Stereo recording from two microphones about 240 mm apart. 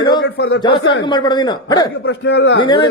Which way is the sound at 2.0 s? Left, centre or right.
Left.